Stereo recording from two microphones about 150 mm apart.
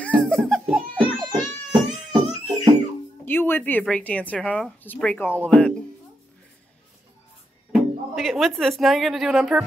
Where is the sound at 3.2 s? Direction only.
15° left (ahead or behind).